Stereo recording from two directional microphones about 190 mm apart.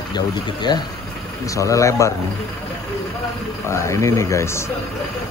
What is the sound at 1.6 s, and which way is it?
Speech, 15° left (ahead or behind).